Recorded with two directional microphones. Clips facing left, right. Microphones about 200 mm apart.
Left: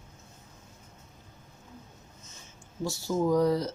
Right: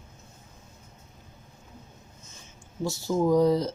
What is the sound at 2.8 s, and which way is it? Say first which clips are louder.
Speech: right 3 dB; 20° right (ahead or behind).